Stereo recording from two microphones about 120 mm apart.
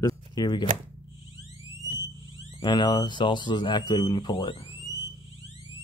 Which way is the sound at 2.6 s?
40° left (ahead or behind).